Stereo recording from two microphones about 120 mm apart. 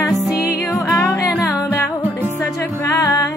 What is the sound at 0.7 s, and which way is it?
Music, 20° left (ahead or behind).